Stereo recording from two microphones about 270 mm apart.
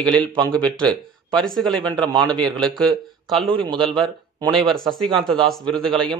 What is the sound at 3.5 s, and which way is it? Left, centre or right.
Speech, centre.